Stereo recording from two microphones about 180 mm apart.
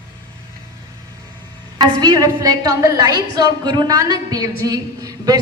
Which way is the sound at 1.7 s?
20° right (ahead or behind).